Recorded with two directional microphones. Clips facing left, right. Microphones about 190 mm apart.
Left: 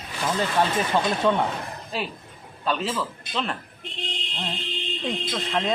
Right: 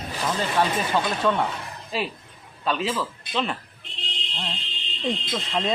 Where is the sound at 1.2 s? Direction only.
10° left (ahead or behind).